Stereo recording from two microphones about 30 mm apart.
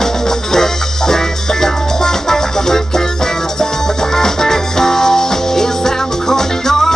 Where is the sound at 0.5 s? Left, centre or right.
Centre.